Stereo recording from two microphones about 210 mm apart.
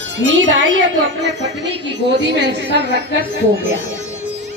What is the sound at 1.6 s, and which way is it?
Speech, 55° right (ahead or behind).